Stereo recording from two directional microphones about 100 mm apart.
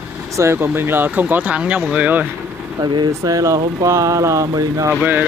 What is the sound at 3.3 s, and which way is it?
Speech, 35° right (ahead or behind).